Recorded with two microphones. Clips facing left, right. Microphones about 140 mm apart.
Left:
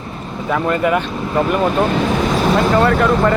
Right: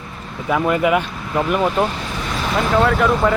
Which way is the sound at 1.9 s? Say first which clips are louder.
Left 11 dB; 70° left (ahead or behind).